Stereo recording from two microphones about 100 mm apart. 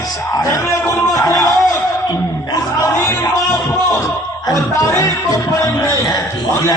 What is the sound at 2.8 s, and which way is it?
Music, 30° left (ahead or behind).